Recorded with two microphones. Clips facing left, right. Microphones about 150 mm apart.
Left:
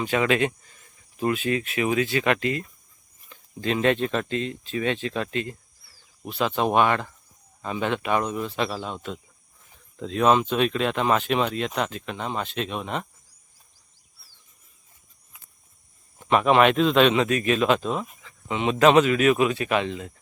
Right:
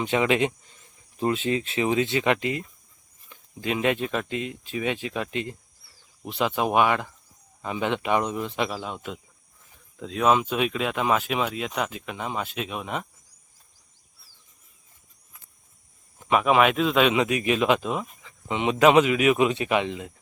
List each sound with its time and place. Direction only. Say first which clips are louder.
0.0 s speech: even; 20° right (ahead or behind)
16.3 s speech: left 2 dB; 5° right (ahead or behind)